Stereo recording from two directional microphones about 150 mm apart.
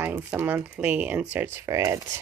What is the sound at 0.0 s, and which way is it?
Speech, 15° right (ahead or behind).